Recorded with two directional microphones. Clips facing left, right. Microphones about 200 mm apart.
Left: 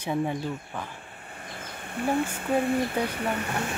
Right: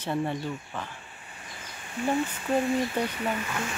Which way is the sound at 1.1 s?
55° left (ahead or behind).